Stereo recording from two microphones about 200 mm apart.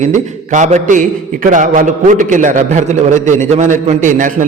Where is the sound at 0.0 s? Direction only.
35° right (ahead or behind).